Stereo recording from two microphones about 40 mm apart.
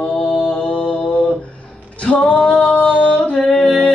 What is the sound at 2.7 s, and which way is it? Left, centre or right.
Singing, left.